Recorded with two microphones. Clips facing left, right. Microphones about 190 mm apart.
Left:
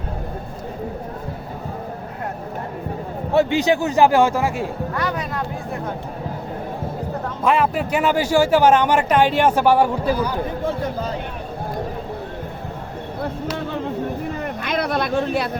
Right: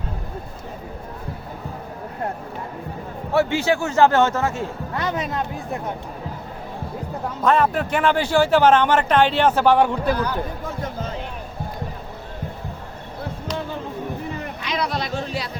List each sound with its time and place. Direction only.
3.3 s a man's voice: 15° left (ahead or behind)
4.9 s speech: 20° right (ahead or behind)
7.4 s a man's voice: 10° left (ahead or behind)
14.6 s a sound: 55° left (ahead or behind)